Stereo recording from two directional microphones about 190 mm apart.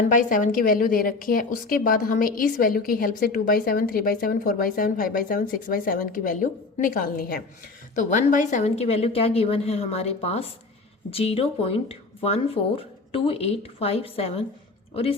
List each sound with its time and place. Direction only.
0.1 s a woman's voice: 45° left (ahead or behind)